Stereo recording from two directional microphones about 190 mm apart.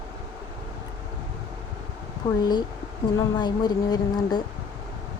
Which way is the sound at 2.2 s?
20° left (ahead or behind).